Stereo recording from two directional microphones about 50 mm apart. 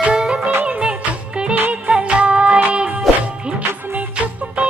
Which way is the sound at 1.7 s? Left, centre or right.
Right.